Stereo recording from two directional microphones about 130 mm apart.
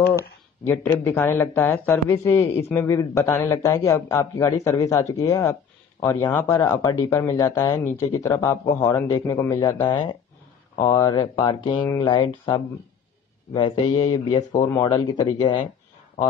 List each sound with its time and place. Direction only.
0.7 s a man's voice: 15° left (ahead or behind); by 15.6 s 35° left (ahead or behind)